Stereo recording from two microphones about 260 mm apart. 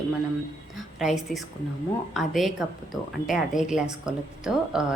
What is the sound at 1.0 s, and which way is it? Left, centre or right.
A woman's voice, centre.